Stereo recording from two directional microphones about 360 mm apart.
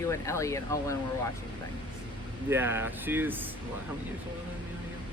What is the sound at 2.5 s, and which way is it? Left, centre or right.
Speech, centre.